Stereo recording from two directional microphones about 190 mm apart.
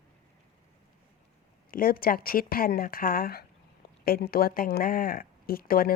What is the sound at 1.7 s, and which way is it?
Speech, 50° left (ahead or behind).